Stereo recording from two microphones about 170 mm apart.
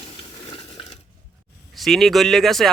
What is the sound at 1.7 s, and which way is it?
Speech, centre (ahead or behind).